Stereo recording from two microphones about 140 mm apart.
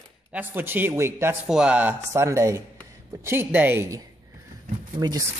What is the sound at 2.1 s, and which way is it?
A man's voice, 20° right (ahead or behind).